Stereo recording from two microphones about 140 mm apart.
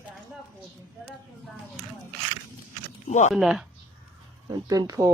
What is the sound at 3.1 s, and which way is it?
Speech, 55° left (ahead or behind).